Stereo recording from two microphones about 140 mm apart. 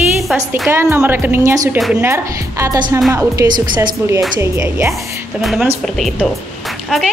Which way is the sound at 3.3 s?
30° right (ahead or behind).